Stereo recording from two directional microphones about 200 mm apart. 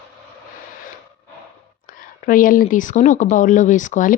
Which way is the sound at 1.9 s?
45° left (ahead or behind).